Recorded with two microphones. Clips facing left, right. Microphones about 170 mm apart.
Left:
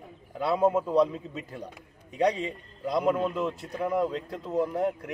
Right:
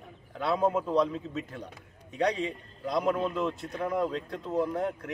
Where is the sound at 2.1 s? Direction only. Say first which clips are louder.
Left 2 dB; 5° left (ahead or behind).